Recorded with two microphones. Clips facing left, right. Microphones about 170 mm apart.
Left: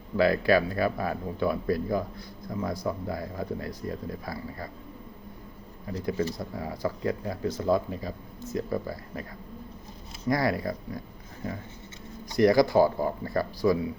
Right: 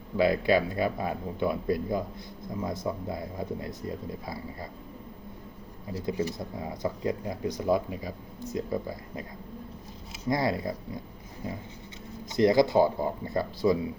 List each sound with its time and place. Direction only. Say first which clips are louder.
0.2 s speech: left 1 dB; 20° right (ahead or behind)
6.1 s speech: left 1 dB; 15° right (ahead or behind)
10.2 s speech: left 1 dB; 20° right (ahead or behind)
12.4 s speech: left 1 dB; 20° right (ahead or behind)